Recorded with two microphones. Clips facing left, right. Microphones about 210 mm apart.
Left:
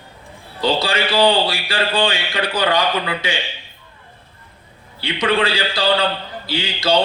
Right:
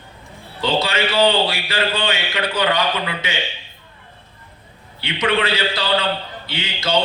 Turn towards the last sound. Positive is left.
turn(degrees=35)  # may be behind; listen again after turning